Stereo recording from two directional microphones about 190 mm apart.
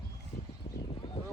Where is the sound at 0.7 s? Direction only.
35° left (ahead or behind).